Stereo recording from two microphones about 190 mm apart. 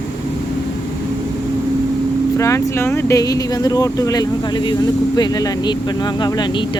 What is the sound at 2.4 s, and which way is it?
Speech, 15° left (ahead or behind).